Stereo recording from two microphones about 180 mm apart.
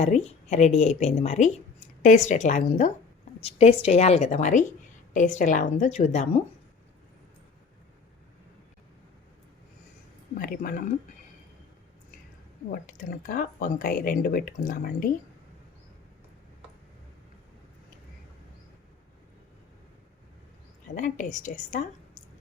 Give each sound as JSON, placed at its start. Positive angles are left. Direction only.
{"t": 0.0, "sound": "speech", "side_deg": 40}
{"t": 10.3, "sound": "speech", "side_deg": 50}
{"t": 12.9, "sound": "speech", "side_deg": 45}
{"t": 20.9, "sound": "speech", "side_deg": 45}